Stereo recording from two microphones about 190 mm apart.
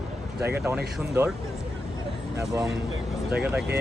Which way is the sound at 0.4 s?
15° right (ahead or behind).